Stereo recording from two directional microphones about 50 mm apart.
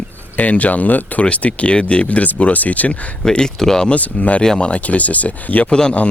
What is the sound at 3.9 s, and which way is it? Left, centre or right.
Speech, left.